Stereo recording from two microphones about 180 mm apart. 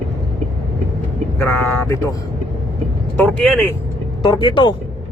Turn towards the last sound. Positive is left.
turn(degrees=25)  # may be behind; listen again after turning